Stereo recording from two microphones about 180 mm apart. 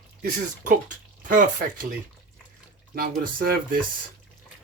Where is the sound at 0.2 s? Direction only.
50° right (ahead or behind).